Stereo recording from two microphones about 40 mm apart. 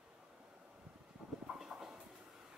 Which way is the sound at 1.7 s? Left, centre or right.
Right.